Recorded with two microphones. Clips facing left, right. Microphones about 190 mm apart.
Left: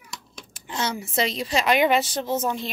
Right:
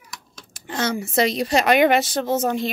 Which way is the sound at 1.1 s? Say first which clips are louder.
Right 5 dB; 55° right (ahead or behind).